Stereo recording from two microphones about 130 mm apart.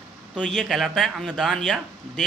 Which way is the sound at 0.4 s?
5° left (ahead or behind).